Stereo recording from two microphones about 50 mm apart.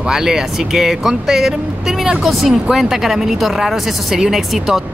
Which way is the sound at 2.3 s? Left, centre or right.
Centre.